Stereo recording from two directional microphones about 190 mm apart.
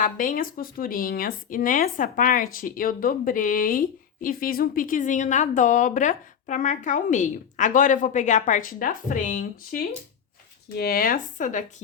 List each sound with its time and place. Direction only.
0.0 s speech: 45° left (ahead or behind)